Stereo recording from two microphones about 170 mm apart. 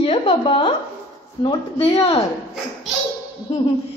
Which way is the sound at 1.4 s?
30° left (ahead or behind).